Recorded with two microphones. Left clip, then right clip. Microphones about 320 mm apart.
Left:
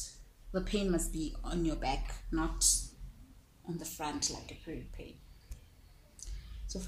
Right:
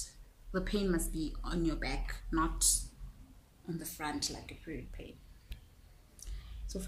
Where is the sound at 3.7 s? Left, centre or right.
Centre.